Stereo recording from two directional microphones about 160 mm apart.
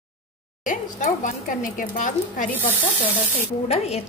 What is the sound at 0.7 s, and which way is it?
Speech, 50° left (ahead or behind).